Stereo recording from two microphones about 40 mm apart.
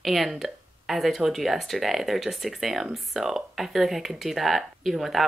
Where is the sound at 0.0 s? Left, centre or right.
Centre.